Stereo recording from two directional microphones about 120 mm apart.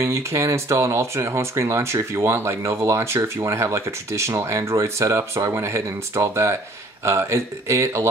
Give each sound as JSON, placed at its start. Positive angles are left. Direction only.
{"t": 0.0, "sound": "speech", "side_deg": -25}